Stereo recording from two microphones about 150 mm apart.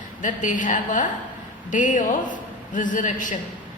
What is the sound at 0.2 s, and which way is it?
A woman's voice, 60° left (ahead or behind).